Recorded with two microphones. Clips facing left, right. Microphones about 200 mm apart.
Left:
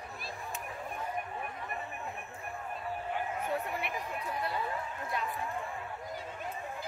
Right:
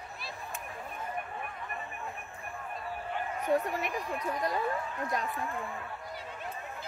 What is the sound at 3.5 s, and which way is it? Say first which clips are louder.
Speech: right 9 dB; 40° right (ahead or behind).